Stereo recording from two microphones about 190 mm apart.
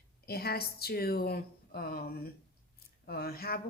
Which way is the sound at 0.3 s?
55° left (ahead or behind).